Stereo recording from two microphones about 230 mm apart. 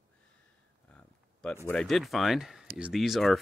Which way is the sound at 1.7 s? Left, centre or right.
Centre.